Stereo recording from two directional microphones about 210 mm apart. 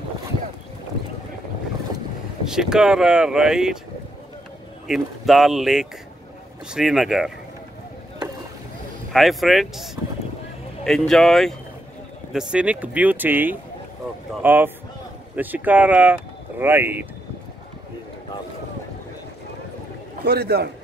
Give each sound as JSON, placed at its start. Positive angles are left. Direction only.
{"t": 2.4, "sound": "speech", "side_deg": 0}
{"t": 4.8, "sound": "speech", "side_deg": 0}
{"t": 9.1, "sound": "speech", "side_deg": 0}
{"t": 20.2, "sound": "a man's voice", "side_deg": -50}